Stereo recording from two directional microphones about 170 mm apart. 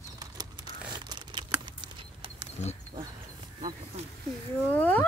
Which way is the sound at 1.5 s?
30° right (ahead or behind).